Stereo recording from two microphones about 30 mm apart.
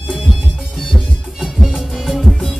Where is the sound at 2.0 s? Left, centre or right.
Centre.